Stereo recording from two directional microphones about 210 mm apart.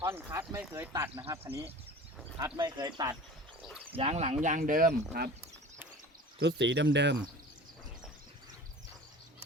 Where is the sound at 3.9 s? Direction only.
30° right (ahead or behind); by 5.3 s 50° right (ahead or behind).